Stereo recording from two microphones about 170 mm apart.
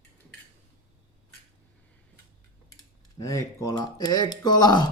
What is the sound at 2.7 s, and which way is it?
Speech, 20° left (ahead or behind).